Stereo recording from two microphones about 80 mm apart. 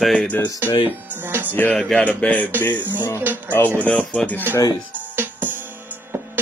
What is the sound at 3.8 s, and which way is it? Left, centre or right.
Speech, centre.